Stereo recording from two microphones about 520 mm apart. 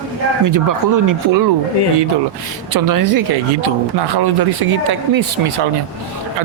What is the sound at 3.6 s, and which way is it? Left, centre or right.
Speech, right.